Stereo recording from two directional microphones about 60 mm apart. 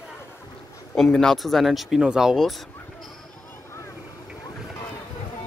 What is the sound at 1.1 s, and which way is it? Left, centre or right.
Speech, centre.